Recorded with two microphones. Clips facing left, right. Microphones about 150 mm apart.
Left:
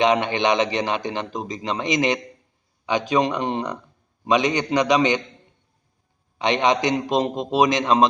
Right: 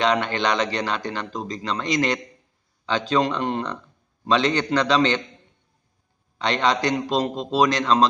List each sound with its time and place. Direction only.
0.0 s a man's voice: 20° left (ahead or behind)
6.4 s a man's voice: 20° left (ahead or behind)